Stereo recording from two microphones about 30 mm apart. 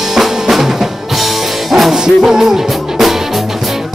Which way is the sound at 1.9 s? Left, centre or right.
Centre.